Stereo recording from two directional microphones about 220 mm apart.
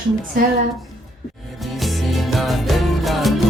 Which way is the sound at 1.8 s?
Centre (ahead or behind).